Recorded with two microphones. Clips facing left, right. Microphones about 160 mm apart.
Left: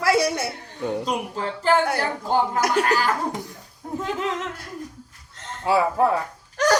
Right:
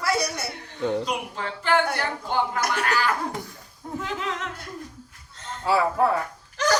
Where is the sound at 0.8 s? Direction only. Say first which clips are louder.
Right 1 dB; 10° left (ahead or behind).